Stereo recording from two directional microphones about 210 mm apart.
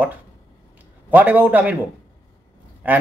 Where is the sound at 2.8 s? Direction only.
10° right (ahead or behind).